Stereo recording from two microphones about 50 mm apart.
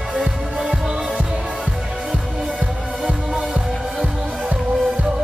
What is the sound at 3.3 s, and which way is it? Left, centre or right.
Music, centre.